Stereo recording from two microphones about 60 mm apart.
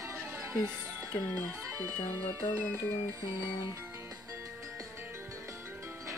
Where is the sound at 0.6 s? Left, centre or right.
Right.